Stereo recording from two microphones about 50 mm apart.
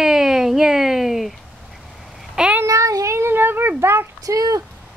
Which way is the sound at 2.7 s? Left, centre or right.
Right.